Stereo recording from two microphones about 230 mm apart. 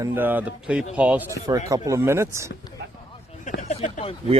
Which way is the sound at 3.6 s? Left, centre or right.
Left.